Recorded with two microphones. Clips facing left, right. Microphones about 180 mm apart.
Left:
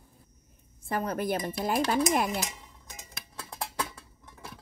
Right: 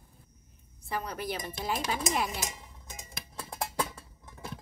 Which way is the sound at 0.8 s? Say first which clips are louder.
Left 5 dB; 50° left (ahead or behind).